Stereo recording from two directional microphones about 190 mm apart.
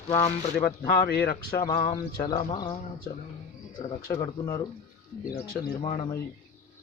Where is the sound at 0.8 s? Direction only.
55° left (ahead or behind).